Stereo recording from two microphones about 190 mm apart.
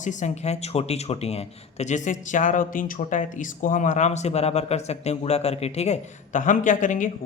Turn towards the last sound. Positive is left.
turn(degrees=40)  # may be behind; listen again after turning